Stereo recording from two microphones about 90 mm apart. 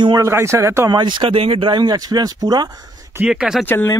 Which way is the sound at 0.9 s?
60° right (ahead or behind).